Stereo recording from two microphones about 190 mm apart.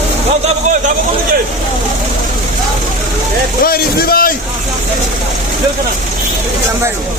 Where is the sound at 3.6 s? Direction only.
50° left (ahead or behind).